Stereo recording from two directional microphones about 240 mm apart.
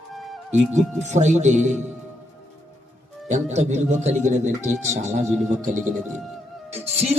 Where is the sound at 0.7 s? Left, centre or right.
Right.